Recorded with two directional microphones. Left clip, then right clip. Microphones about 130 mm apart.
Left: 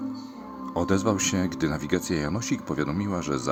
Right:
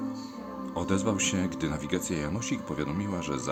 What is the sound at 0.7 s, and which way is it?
Speech, 35° left (ahead or behind).